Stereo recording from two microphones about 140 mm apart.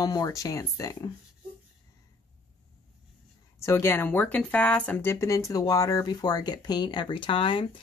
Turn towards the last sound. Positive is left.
turn(degrees=35)  # may be behind; listen again after turning